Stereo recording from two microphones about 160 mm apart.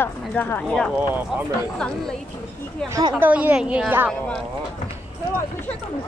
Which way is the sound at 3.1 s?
10° right (ahead or behind).